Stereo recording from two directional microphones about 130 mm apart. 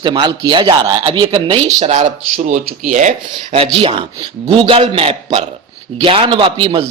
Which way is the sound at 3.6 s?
40° right (ahead or behind).